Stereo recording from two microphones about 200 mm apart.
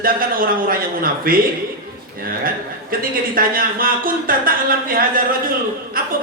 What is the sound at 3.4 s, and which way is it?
A man's voice, 45° right (ahead or behind).